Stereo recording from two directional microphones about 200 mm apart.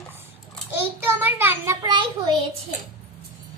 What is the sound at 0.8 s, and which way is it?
A child's voice, 10° right (ahead or behind).